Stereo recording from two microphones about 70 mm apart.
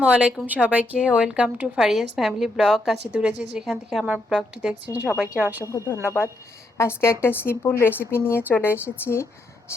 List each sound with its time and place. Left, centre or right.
0.0 s speech: centre
3.1 s a woman's voice: centre
4.0 s a woman's voice: centre
5.6 s a woman's voice: left